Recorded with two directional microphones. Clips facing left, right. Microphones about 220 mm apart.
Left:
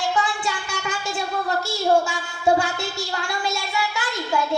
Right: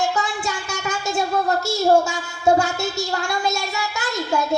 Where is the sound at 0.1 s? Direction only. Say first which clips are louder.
Even; 45° right (ahead or behind).